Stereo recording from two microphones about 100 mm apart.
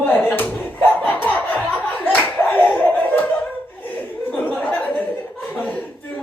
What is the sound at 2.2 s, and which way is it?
Clapping, 20° left (ahead or behind).